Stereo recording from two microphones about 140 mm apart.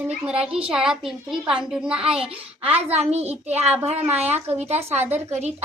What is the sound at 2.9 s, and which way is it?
A woman's voice, 50° right (ahead or behind).